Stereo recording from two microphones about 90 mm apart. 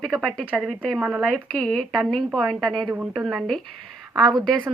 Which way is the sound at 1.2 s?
5° left (ahead or behind).